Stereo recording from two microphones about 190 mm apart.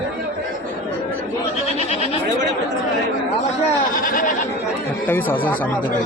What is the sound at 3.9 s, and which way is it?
Goat, 45° left (ahead or behind).